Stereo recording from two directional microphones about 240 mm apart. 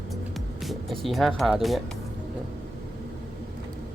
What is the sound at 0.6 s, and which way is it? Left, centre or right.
Speech, centre.